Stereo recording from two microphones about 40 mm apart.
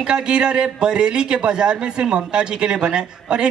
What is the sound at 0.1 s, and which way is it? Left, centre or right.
A man's voice, right.